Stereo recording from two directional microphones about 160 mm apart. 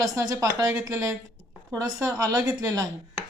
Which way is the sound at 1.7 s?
20° right (ahead or behind).